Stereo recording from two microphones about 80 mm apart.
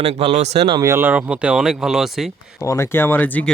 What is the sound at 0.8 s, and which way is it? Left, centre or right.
Speech, right.